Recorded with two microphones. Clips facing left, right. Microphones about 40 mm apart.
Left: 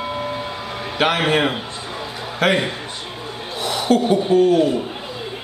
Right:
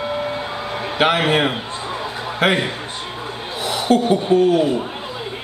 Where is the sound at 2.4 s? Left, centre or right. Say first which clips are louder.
Even; centre.